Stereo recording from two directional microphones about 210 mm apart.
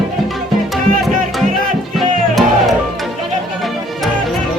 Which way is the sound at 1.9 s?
Centre (ahead or behind).